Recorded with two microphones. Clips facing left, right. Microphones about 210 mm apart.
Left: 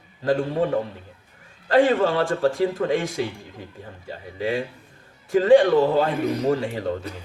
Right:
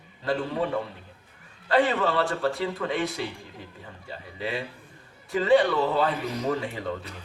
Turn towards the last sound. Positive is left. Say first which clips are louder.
# left 6 dB
turn(degrees=45)  # may be behind; listen again after turning